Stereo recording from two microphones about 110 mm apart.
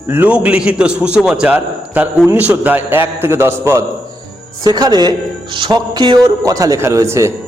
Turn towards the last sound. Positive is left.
turn(degrees=-25)  # may be behind; listen again after turning